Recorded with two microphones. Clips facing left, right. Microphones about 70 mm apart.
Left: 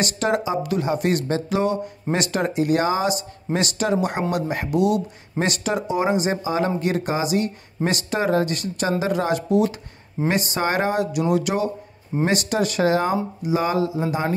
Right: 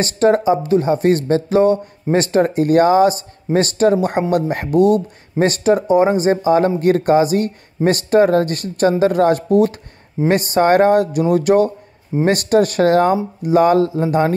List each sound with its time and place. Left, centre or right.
0.0 s speech: right